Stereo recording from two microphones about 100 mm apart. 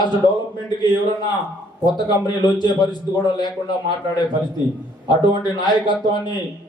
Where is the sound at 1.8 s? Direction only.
45° left (ahead or behind).